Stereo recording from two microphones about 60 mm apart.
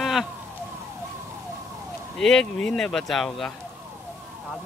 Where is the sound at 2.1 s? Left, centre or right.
Centre.